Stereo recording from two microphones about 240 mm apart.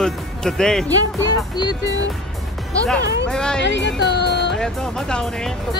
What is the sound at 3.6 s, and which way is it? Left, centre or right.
Music, left.